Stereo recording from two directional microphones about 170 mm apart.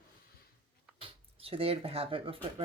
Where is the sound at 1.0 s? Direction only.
35° right (ahead or behind).